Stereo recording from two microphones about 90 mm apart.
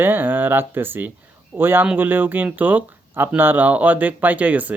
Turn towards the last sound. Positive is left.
turn(degrees=-15)  # may be behind; listen again after turning